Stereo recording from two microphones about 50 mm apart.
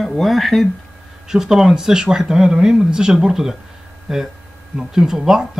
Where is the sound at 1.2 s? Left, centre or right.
Centre.